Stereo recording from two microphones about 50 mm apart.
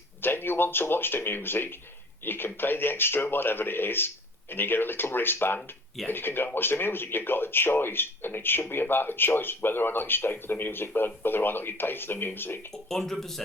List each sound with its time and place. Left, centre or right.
0.2 s speech: left
12.9 s speech: centre